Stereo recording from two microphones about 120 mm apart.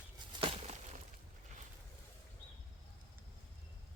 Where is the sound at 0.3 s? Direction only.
55° right (ahead or behind).